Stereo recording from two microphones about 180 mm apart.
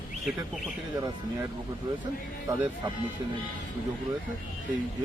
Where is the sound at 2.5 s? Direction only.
20° right (ahead or behind).